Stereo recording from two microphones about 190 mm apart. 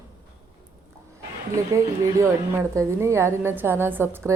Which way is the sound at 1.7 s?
15° right (ahead or behind).